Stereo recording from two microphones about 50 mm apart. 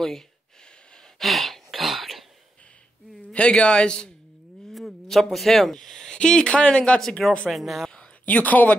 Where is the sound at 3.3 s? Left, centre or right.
Left.